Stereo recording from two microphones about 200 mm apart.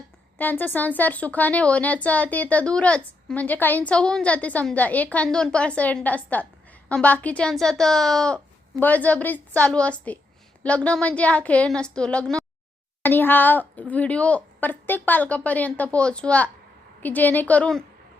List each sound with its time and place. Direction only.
0.3 s a woman's voice: 10° left (ahead or behind)